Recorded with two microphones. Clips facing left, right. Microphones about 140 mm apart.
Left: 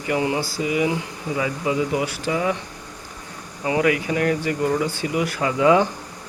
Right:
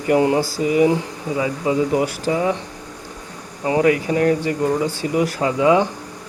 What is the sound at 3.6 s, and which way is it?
Speech, 35° right (ahead or behind).